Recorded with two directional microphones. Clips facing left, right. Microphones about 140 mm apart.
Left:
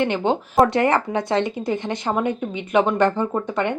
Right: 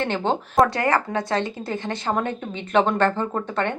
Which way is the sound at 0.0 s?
15° left (ahead or behind).